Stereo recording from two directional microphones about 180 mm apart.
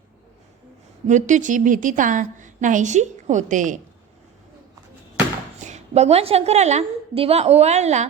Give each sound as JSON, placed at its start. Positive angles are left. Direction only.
{"t": 1.0, "sound": "a woman's voice", "side_deg": -45}
{"t": 5.6, "sound": "a woman's voice", "side_deg": -40}